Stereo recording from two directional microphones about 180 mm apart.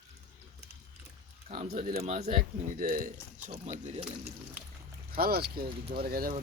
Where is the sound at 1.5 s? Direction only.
45° right (ahead or behind).